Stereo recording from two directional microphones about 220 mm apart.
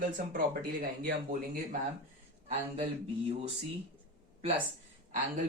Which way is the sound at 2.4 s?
25° right (ahead or behind).